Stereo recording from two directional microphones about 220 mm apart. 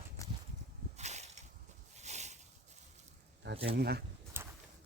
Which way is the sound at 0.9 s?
30° right (ahead or behind).